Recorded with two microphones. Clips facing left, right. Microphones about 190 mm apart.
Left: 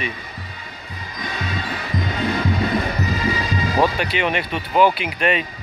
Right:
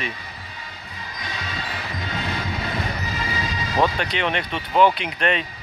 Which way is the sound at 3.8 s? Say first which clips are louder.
Even; 10° left (ahead or behind).